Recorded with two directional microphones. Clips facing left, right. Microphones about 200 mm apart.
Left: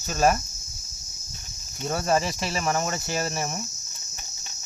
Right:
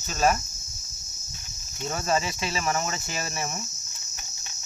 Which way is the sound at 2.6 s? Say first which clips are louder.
Left 3 dB; 40° left (ahead or behind).